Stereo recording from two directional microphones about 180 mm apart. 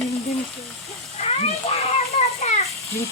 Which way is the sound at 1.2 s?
35° left (ahead or behind).